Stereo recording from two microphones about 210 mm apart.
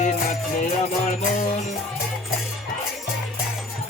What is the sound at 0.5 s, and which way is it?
Music, 35° left (ahead or behind).